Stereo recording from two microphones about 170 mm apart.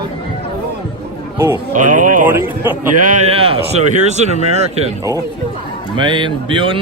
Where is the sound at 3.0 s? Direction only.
45° right (ahead or behind).